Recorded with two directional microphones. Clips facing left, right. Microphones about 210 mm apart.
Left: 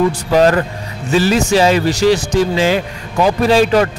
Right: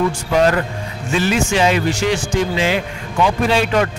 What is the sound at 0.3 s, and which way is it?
A man's voice, 35° left (ahead or behind).